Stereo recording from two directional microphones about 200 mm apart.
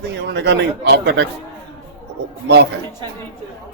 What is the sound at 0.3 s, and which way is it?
Speech, 60° right (ahead or behind).